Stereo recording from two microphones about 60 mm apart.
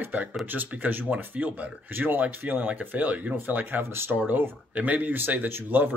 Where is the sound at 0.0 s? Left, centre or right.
Right.